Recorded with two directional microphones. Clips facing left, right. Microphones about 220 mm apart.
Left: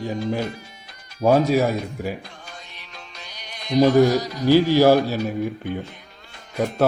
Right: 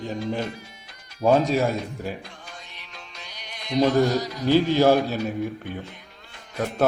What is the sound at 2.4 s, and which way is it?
Music, 40° left (ahead or behind).